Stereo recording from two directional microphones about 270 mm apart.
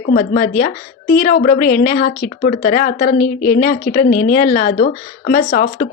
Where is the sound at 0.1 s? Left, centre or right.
Left.